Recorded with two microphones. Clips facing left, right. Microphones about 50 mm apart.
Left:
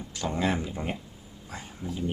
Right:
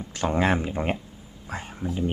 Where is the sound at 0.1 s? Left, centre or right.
Right.